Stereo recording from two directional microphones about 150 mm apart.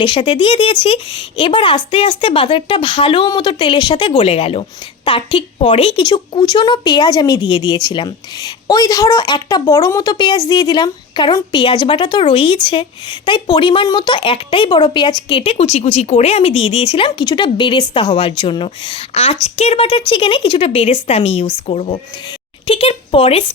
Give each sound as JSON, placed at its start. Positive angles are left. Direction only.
{"t": 0.0, "sound": "a woman's voice", "side_deg": 35}